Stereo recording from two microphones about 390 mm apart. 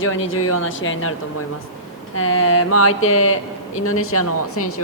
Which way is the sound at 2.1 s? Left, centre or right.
Left.